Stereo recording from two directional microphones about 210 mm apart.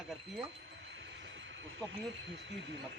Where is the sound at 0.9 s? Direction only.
60° right (ahead or behind).